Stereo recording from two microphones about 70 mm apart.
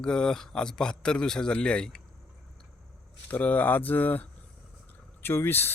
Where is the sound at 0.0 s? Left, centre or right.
Centre.